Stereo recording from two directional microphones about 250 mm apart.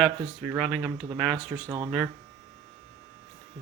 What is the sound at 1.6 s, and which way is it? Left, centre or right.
Speech, centre.